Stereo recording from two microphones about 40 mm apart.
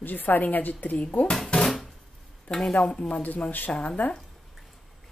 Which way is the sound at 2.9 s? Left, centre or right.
Left.